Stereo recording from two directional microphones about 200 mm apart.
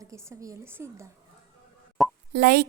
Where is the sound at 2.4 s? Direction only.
50° right (ahead or behind).